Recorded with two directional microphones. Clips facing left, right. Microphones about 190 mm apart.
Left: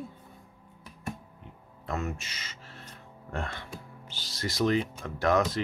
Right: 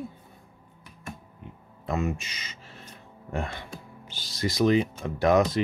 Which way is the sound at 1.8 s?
15° right (ahead or behind).